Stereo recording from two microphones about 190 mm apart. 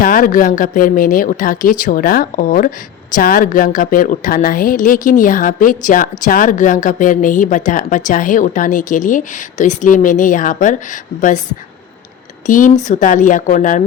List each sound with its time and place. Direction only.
0.0 s speech: 45° left (ahead or behind)
12.5 s speech: 45° left (ahead or behind)